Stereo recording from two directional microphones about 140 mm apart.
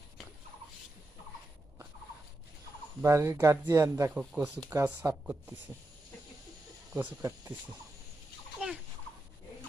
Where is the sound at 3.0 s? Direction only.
20° right (ahead or behind).